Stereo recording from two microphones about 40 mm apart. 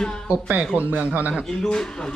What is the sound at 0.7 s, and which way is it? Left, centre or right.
Speech, right.